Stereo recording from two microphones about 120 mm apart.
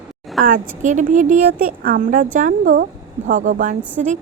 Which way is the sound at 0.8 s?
90° right.